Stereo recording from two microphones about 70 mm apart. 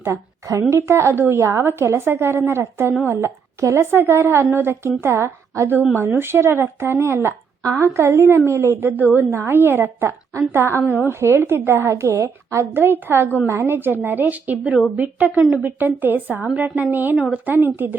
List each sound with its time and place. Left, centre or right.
0.0 s a woman's voice: right
12.7 s a woman's voice: right